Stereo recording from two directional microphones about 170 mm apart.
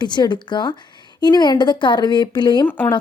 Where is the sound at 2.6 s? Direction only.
10° left (ahead or behind).